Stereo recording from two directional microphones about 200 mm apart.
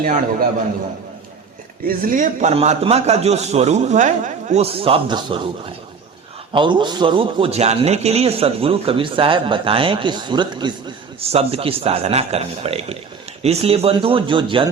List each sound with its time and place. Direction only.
0.0 s a man's voice: 45° right (ahead or behind)
1.9 s a man's voice: 40° right (ahead or behind); by 14.7 s 25° right (ahead or behind)